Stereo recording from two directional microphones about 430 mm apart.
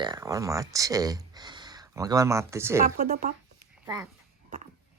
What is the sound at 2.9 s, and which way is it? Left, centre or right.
Speech, centre.